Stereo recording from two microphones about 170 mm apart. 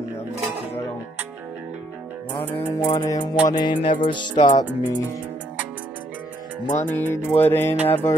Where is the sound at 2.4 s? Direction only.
10° left (ahead or behind).